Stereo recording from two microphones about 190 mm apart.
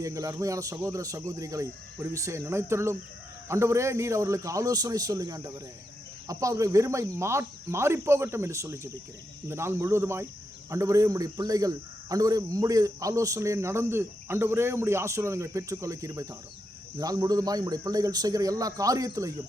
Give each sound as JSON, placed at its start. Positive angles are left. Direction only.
{"t": 0.0, "sound": "a man's voice", "side_deg": -15}